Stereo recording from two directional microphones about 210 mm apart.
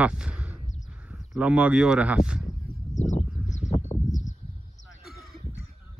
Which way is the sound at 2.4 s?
35° left (ahead or behind).